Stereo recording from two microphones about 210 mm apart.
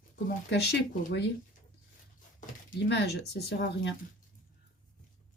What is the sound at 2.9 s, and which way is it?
Speech, 55° left (ahead or behind).